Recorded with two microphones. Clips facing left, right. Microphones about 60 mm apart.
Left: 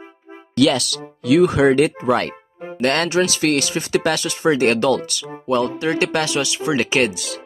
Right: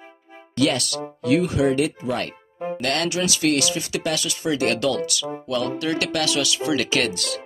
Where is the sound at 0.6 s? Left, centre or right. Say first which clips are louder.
Left 5 dB; left.